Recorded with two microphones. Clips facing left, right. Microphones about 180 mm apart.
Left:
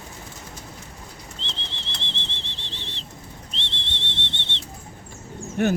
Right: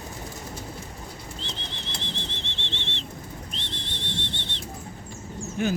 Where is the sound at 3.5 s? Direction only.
25° left (ahead or behind).